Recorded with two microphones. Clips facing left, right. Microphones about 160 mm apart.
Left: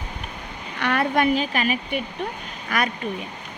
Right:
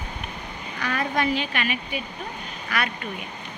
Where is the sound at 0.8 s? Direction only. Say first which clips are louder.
Left 5 dB; 65° left (ahead or behind).